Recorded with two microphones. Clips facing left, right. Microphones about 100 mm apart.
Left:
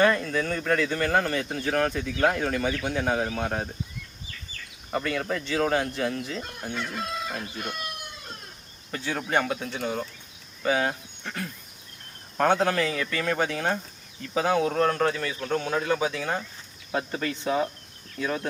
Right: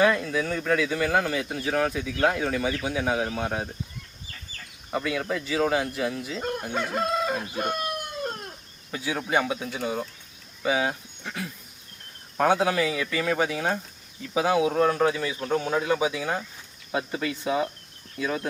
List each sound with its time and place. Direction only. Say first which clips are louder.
0.0 s speech: even; 5° right (ahead or behind)
4.9 s speech: even; 5° right (ahead or behind)
6.7 s crowing: right 6 dB; 45° right (ahead or behind)
8.9 s speech: right 1 dB; 5° right (ahead or behind)